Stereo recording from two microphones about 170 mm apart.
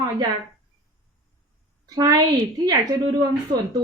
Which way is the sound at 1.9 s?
20° right (ahead or behind).